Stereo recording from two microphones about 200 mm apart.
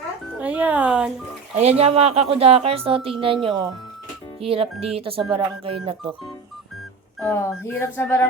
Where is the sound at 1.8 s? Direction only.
30° right (ahead or behind).